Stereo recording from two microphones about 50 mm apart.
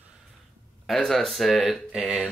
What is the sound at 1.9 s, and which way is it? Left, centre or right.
Speech, centre.